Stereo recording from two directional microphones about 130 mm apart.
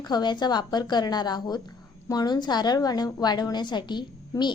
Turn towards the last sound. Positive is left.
turn(degrees=35)  # may be behind; listen again after turning